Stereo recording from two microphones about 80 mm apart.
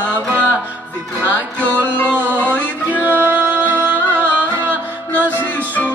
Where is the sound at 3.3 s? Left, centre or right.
Right.